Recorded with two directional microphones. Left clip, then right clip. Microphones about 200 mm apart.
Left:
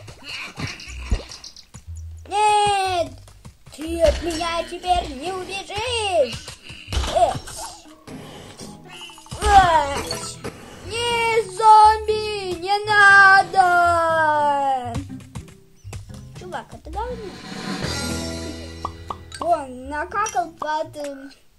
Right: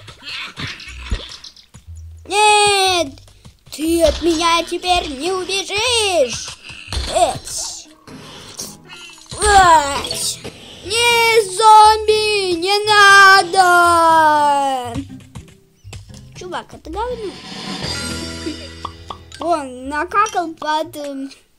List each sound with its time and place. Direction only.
0.2 s a sound: 5° left (ahead or behind)
2.2 s a sound: 60° right (ahead or behind)
6.2 s babbling: 5° right (ahead or behind)
9.4 s music: 60° right (ahead or behind)
10.4 s music: centre (ahead or behind)
10.9 s child singing: 60° right (ahead or behind)
14.9 s music: centre (ahead or behind)
16.3 s music: 60° right (ahead or behind)
17.1 s music: centre (ahead or behind)
19.5 s music: 60° right (ahead or behind)
20.6 s a sound: 60° right (ahead or behind)